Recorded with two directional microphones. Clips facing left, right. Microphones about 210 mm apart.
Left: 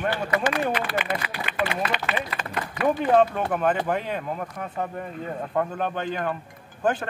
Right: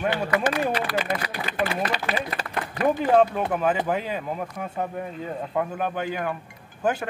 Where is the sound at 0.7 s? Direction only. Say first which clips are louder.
Right 1 dB; 40° right (ahead or behind).